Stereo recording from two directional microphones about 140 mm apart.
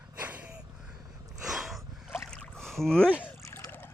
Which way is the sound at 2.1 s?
5° left (ahead or behind).